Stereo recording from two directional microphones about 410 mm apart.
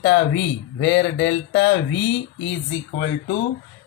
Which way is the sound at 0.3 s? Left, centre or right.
Left.